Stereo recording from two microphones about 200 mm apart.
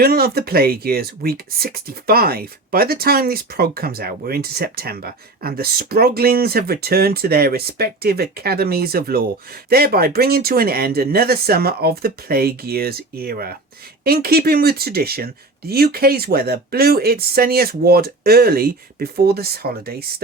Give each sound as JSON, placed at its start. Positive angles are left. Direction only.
{"t": 0.0, "sound": "speech", "side_deg": -50}